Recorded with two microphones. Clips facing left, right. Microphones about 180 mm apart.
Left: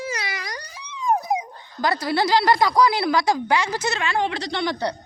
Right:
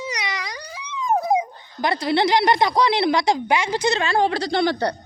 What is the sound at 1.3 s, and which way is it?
Speech, 25° right (ahead or behind).